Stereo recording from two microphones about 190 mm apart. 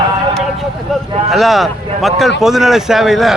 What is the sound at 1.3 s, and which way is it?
Speech, centre (ahead or behind).